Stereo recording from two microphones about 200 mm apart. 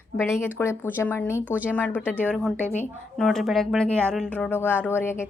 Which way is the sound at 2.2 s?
5° left (ahead or behind).